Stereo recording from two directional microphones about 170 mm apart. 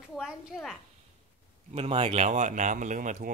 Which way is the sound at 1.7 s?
35° right (ahead or behind).